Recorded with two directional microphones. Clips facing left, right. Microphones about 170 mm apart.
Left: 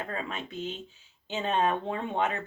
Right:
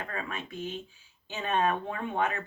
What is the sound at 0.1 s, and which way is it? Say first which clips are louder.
Speech: left 2 dB; 25° left (ahead or behind).